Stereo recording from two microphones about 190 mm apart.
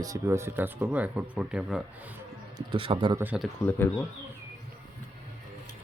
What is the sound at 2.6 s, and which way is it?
Speech, 25° right (ahead or behind).